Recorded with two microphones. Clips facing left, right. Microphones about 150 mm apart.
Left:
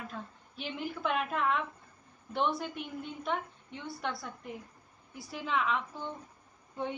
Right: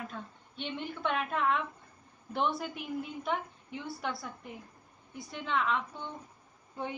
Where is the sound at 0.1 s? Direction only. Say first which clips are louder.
Even; 5° left (ahead or behind).